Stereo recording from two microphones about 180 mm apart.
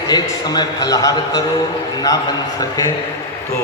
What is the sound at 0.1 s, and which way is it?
A man's voice, 20° left (ahead or behind).